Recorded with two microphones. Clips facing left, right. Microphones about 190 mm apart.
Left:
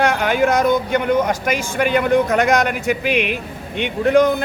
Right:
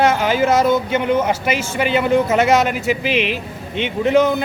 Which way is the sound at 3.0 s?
50° left (ahead or behind).